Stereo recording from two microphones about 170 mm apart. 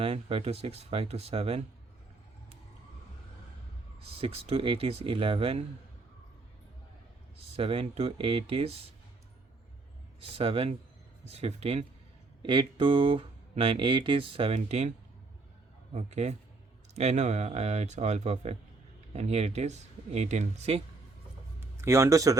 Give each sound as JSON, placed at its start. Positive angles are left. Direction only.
{"t": 0.0, "sound": "speech", "side_deg": -35}
{"t": 4.0, "sound": "speech", "side_deg": -35}
{"t": 7.3, "sound": "speech", "side_deg": -35}
{"t": 10.2, "sound": "speech", "side_deg": -35}
{"t": 21.8, "sound": "speech", "side_deg": -15}